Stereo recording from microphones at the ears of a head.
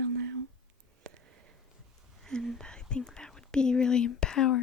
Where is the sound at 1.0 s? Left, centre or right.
Right.